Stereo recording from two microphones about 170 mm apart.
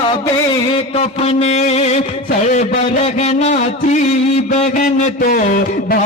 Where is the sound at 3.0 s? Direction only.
40° left (ahead or behind); by 6.0 s 55° left (ahead or behind).